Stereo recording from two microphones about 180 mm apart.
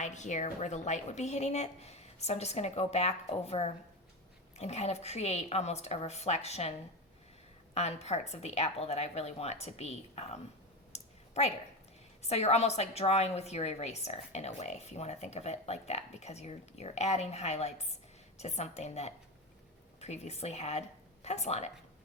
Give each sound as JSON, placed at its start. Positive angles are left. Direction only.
{"t": 0.0, "sound": "a woman's voice", "side_deg": 40}
{"t": 10.9, "sound": "a sound", "side_deg": 40}
{"t": 12.2, "sound": "a woman's voice", "side_deg": 35}